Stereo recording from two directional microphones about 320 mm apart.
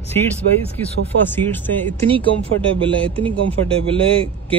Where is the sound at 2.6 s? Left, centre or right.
Centre.